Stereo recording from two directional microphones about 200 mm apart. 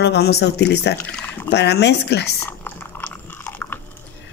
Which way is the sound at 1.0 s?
10° left (ahead or behind).